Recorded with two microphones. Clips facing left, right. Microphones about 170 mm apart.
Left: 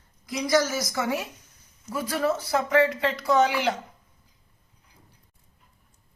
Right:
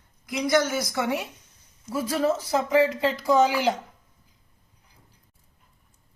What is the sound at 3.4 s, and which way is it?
Speech, 35° right (ahead or behind).